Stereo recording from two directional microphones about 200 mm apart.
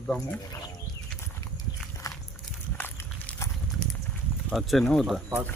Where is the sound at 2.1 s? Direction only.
15° left (ahead or behind).